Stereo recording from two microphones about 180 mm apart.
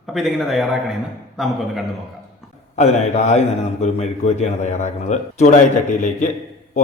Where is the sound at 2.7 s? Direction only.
40° left (ahead or behind).